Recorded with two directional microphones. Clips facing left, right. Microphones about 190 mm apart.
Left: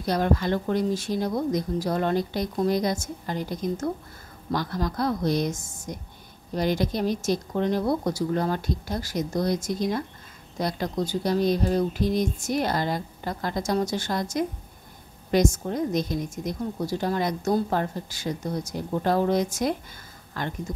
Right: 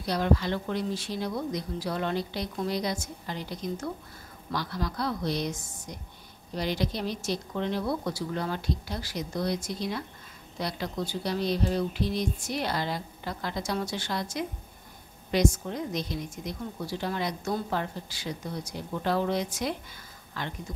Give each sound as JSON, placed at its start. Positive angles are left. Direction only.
{"t": 0.0, "sound": "a woman's voice", "side_deg": 50}